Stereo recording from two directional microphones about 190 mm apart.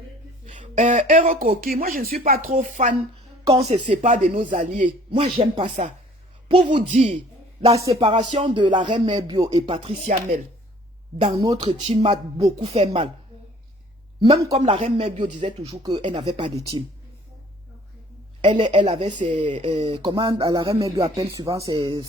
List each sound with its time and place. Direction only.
0.4 s speech: 40° right (ahead or behind)
5.2 s speech: 25° right (ahead or behind)
11.2 s speech: 25° right (ahead or behind)
14.5 s speech: 35° right (ahead or behind)
18.4 s speech: 25° right (ahead or behind)